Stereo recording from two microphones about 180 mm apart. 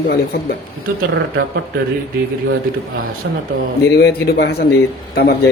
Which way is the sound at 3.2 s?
80° right.